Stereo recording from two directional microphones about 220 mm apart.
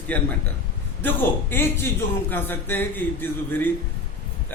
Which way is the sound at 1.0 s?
10° left (ahead or behind).